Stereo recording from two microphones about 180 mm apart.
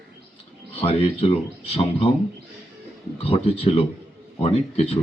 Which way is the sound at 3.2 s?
35° left (ahead or behind).